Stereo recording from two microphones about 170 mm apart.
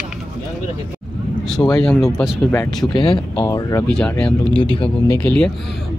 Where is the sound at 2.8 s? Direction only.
25° left (ahead or behind).